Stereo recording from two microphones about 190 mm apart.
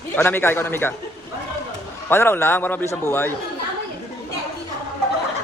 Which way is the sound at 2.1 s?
10° left (ahead or behind).